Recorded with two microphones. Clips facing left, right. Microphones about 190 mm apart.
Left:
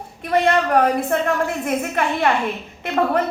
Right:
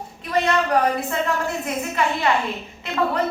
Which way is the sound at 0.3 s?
55° left (ahead or behind).